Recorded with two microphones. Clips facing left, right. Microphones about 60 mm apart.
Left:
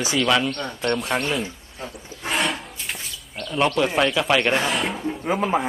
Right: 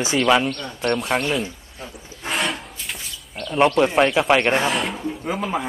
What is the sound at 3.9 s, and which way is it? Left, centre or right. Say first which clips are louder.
Speech: right 3 dB; centre.